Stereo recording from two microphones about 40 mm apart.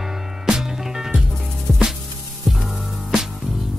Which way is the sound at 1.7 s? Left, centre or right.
Centre.